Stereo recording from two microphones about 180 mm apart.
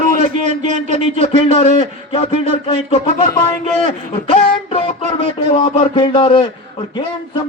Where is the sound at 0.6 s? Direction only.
45° right (ahead or behind).